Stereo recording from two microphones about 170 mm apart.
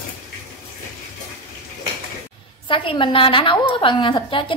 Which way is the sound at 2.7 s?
30° left (ahead or behind).